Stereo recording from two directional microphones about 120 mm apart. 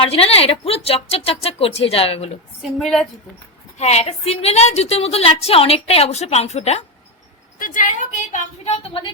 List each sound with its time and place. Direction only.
0.0 s a woman's voice: 55° left (ahead or behind)
2.6 s a woman's voice: centre (ahead or behind)
3.8 s a woman's voice: 65° left (ahead or behind)
7.7 s a woman's voice: 90° left; by 9.0 s 60° left (ahead or behind)